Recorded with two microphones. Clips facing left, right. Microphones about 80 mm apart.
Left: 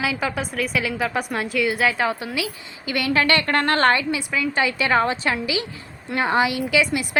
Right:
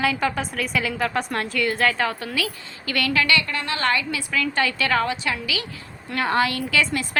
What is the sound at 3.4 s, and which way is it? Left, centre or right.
Speech, left.